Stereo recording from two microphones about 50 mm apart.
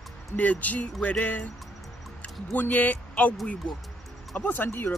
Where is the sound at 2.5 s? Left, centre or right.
Left.